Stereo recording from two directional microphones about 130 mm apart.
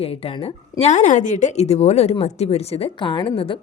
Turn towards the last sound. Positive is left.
turn(degrees=40)  # may be behind; listen again after turning